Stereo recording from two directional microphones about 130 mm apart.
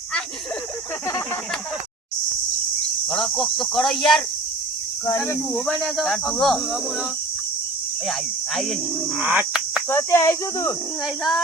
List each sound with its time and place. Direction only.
3.1 s speech: 5° left (ahead or behind)
5.6 s speech: centre (ahead or behind)
9.1 s bird: 10° right (ahead or behind)
9.9 s speech: 20° left (ahead or behind)